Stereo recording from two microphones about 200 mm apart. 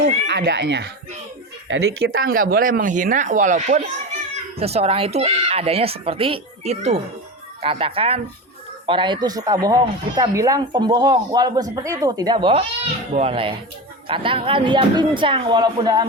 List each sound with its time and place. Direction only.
0.3 s a child's voice: 60° right (ahead or behind)
1.6 s speech: 70° right (ahead or behind)
2.2 s speech: 45° right (ahead or behind); by 16.0 s 20° right (ahead or behind)